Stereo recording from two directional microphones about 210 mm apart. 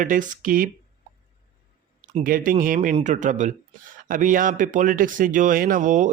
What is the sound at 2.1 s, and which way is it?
Speech, 40° right (ahead or behind).